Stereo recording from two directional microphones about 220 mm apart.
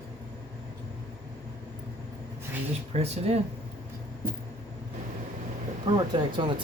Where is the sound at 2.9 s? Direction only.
30° right (ahead or behind).